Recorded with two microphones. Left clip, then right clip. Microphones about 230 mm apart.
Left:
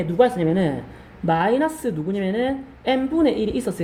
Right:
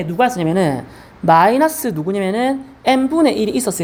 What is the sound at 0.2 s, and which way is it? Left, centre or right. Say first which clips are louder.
A woman's voice: right 3 dB; right.